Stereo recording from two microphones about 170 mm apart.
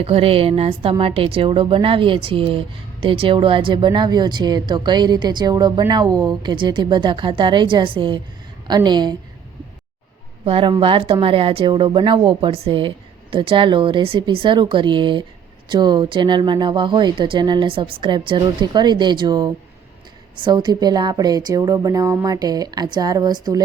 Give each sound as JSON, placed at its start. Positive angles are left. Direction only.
{"t": 0.0, "sound": "a woman's voice", "side_deg": -35}
{"t": 10.4, "sound": "a woman's voice", "side_deg": -30}
{"t": 18.6, "sound": "a woman's voice", "side_deg": -25}